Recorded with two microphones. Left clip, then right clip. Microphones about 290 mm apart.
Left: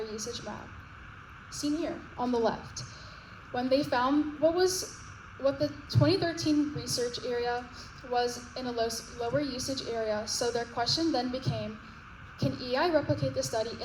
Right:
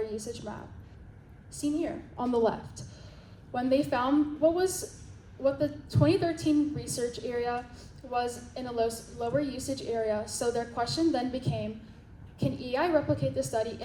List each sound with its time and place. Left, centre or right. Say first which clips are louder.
0.1 s a woman's voice: even; left
1.6 s a woman's voice: right 1 dB; left